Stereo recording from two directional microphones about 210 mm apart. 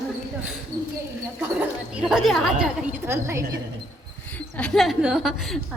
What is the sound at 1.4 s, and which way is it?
A woman's voice, 5° right (ahead or behind).